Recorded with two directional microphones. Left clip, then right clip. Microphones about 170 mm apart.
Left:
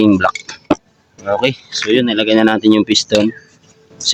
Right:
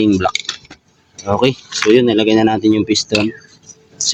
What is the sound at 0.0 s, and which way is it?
Speech, 10° left (ahead or behind).